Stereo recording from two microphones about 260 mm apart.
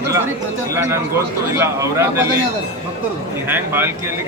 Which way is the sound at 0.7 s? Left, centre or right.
Centre.